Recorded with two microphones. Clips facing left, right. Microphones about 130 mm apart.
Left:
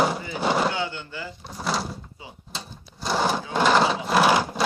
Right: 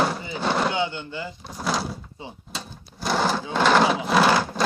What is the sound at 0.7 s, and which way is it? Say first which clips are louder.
Speech: right 3 dB; 20° right (ahead or behind).